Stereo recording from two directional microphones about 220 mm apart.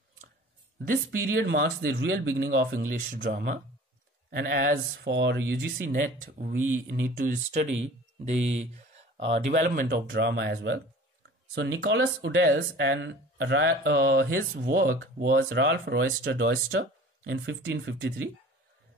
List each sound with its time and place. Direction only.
1.4 s speech: 50° right (ahead or behind)
5.9 s speech: 40° right (ahead or behind)
9.6 s speech: 45° right (ahead or behind)